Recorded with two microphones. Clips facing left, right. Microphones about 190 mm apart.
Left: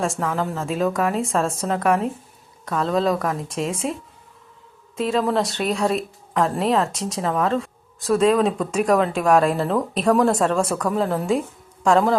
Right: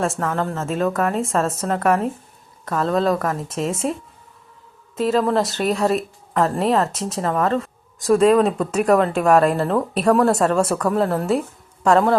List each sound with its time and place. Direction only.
0.0 s a woman's voice: centre (ahead or behind)
4.9 s a woman's voice: centre (ahead or behind)